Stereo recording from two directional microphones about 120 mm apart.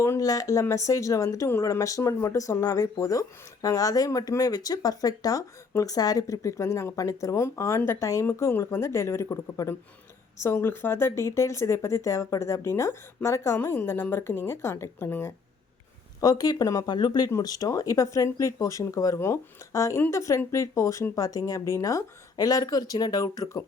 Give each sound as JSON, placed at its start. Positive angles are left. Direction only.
{"t": 0.0, "sound": "speech", "side_deg": 25}
{"t": 16.2, "sound": "speech", "side_deg": 30}